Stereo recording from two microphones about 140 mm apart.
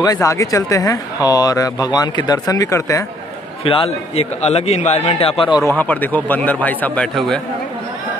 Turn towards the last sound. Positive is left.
turn(degrees=5)  # may be behind; listen again after turning